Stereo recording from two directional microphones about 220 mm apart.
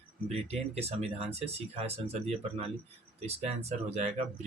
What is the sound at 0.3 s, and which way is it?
Speech, 30° right (ahead or behind).